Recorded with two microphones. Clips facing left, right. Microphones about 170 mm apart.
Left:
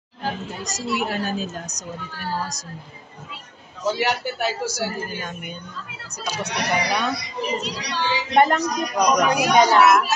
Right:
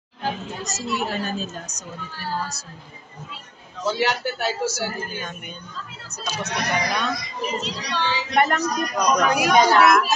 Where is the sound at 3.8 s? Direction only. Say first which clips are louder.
Even; 15° left (ahead or behind).